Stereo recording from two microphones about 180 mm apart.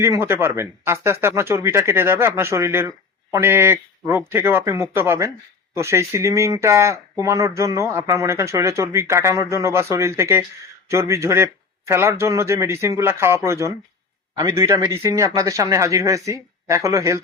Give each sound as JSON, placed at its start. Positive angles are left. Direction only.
{"t": 0.0, "sound": "speech", "side_deg": -15}